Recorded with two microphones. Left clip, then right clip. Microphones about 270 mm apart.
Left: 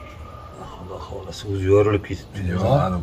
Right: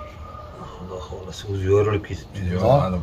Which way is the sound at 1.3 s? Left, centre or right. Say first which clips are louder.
Left 2 dB; left.